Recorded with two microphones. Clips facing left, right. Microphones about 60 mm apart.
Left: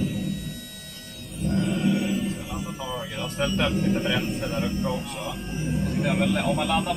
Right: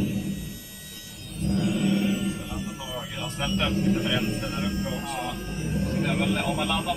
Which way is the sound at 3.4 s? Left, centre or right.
Left.